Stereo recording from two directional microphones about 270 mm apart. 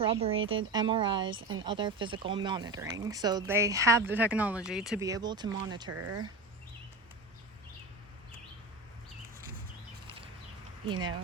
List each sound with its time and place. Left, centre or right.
0.0 s speech: right
1.4 s speech: right
1.6 s speech: centre
4.9 s speech: centre
5.9 s speech: right